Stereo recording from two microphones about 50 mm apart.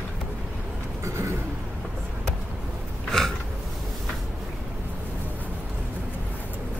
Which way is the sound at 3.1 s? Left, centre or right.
Centre.